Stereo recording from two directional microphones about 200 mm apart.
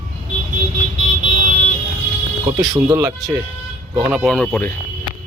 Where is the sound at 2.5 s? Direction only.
20° right (ahead or behind).